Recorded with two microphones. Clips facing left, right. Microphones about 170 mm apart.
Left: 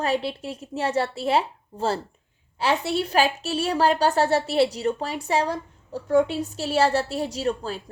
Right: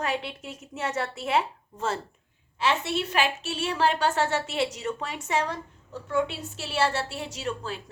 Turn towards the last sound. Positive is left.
turn(degrees=35)  # may be behind; listen again after turning